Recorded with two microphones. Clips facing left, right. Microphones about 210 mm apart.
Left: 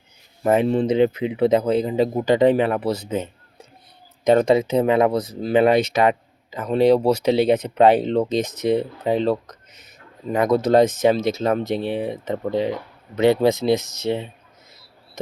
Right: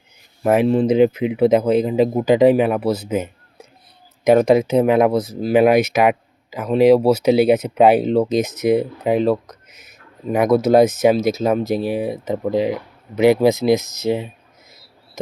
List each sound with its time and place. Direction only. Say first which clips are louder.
0.4 s speech: right 3 dB; 5° right (ahead or behind)
13.8 s speech: right 3 dB; 35° left (ahead or behind)